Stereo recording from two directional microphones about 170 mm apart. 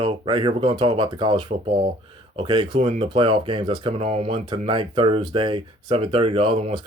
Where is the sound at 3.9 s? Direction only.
40° right (ahead or behind).